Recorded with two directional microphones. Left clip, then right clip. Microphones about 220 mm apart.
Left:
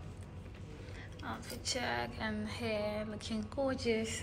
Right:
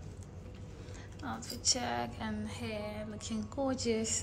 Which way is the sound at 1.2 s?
15° right (ahead or behind).